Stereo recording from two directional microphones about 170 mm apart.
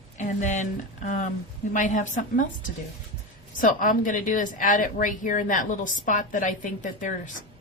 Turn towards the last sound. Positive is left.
turn(degrees=50)  # may be behind; listen again after turning